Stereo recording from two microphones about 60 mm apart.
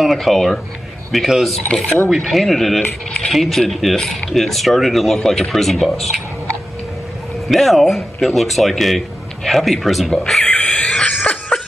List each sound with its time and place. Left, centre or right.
0.0 s a man's voice: centre
1.7 s speech: left
2.0 s a man's voice: centre
7.4 s a man's voice: centre
10.4 s a sound: left
10.8 s cough: centre